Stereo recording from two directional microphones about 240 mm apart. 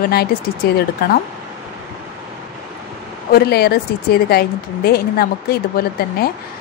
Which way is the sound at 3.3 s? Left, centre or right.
Left.